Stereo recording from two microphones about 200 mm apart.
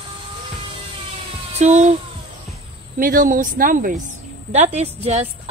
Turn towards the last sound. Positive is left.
turn(degrees=-30)  # may be behind; listen again after turning